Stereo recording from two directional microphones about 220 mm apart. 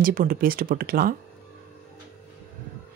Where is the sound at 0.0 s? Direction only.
40° right (ahead or behind).